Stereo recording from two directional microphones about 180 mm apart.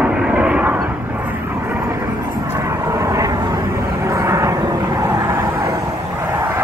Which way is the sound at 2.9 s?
15° right (ahead or behind).